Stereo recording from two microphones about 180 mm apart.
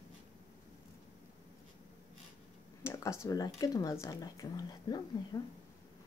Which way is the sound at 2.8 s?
15° left (ahead or behind).